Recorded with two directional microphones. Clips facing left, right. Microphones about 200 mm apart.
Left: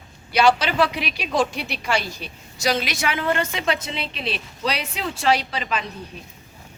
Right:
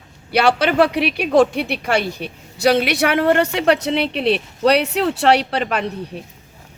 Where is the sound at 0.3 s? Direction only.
60° right (ahead or behind).